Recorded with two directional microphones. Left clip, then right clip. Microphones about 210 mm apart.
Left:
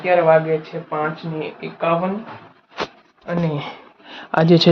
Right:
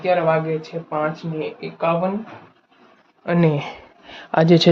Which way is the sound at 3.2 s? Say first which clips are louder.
Right 4 dB; 60° right (ahead or behind).